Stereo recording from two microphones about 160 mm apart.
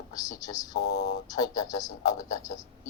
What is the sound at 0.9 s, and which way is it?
Speech, 90° left.